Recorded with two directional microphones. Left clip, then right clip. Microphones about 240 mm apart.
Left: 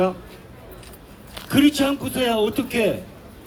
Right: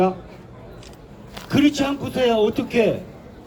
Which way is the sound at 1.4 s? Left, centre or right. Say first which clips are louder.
Left 1 dB; centre.